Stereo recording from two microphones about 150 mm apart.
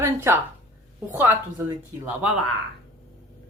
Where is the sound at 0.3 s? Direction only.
15° right (ahead or behind).